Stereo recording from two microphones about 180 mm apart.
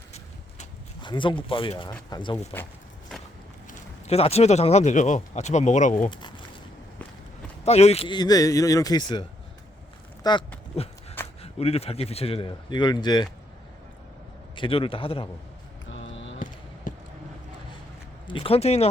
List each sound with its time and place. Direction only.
1.0 s speech: 25° left (ahead or behind)
3.7 s speech: 35° left (ahead or behind)
6.1 s speech: 25° left (ahead or behind)
7.6 s speech: 35° left (ahead or behind)
10.3 s speech: 20° left (ahead or behind)
10.8 s speech: 35° left (ahead or behind)
14.5 s speech: 30° left (ahead or behind)
15.9 s a sound: 90° left
16.9 s a sound: 45° left (ahead or behind)
18.3 s speech: 30° left (ahead or behind)